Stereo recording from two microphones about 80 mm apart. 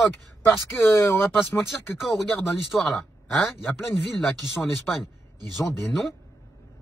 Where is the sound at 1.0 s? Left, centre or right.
Centre.